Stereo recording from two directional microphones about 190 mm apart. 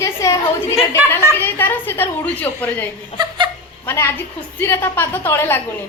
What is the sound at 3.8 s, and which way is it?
A woman's voice, 15° left (ahead or behind).